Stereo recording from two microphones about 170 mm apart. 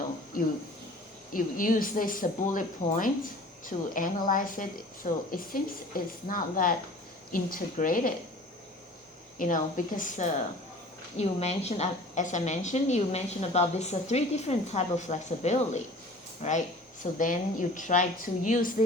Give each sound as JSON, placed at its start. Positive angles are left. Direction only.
{"t": 1.3, "sound": "a woman's voice", "side_deg": 55}
{"t": 9.4, "sound": "a woman's voice", "side_deg": 50}